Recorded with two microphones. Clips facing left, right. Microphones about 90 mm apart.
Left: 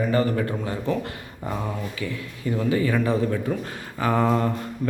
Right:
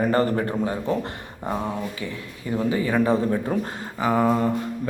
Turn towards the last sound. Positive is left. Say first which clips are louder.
# right 1 dB
turn(degrees=-10)  # may be behind; listen again after turning